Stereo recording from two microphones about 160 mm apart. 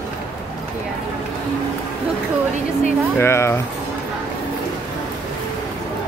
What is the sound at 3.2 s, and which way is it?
Speech, 15° left (ahead or behind).